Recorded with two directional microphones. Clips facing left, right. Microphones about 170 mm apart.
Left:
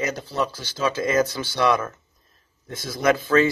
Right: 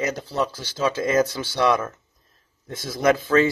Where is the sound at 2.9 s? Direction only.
30° right (ahead or behind).